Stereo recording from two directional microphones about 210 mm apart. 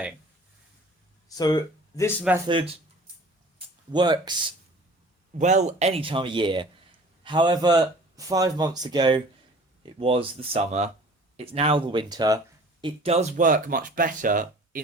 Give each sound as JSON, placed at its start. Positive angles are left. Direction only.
{"t": 1.4, "sound": "speech", "side_deg": 20}
{"t": 3.9, "sound": "speech", "side_deg": -20}
{"t": 5.4, "sound": "speech", "side_deg": -35}